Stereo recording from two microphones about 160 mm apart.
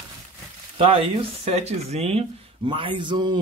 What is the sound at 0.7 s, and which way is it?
Speech, 35° right (ahead or behind).